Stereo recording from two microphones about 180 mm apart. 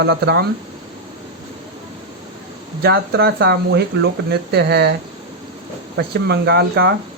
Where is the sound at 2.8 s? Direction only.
65° right (ahead or behind).